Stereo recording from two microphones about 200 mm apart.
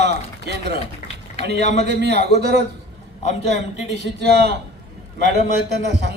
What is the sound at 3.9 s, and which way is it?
Speech, 60° right (ahead or behind).